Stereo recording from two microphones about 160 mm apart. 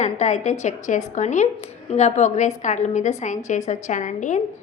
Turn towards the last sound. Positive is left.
turn(degrees=50)  # may be behind; listen again after turning